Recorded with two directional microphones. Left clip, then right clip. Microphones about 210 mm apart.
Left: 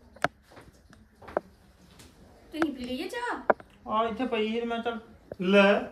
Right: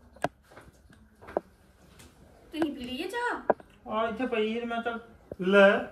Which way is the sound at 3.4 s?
30° right (ahead or behind).